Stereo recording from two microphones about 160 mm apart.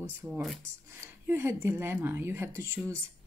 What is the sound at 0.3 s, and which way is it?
Speech, centre (ahead or behind).